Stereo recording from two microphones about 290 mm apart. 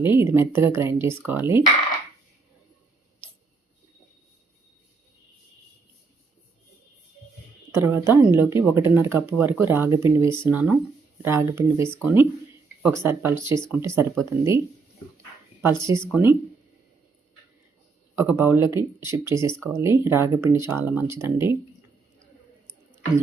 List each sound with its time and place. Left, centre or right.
0.0 s speech: centre
7.7 s speech: centre
11.9 s speech: centre
15.8 s speech: centre
18.2 s speech: centre